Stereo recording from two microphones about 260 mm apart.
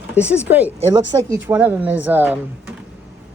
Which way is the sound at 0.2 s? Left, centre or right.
Centre.